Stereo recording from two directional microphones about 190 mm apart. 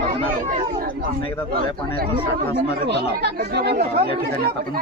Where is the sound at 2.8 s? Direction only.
60° right (ahead or behind).